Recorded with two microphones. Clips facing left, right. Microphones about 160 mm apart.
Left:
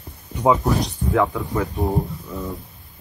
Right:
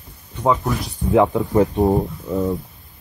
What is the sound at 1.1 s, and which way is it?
Speech, 20° right (ahead or behind).